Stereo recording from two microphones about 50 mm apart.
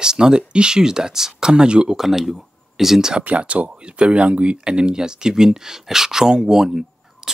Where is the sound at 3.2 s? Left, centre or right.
Right.